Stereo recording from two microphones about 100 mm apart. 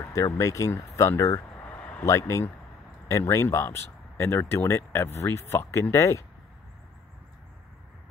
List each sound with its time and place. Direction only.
0.0 s speech: 30° left (ahead or behind)
1.7 s a sound: 15° left (ahead or behind)
2.0 s speech: 30° left (ahead or behind)